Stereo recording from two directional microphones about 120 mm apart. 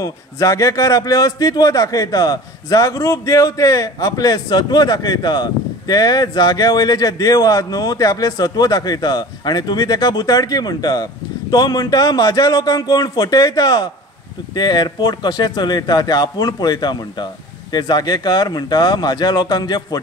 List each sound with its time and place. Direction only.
0.0 s a man's voice: 25° left (ahead or behind)